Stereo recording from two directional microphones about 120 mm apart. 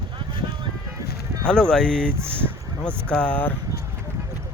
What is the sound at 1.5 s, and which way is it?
Speech, 5° left (ahead or behind).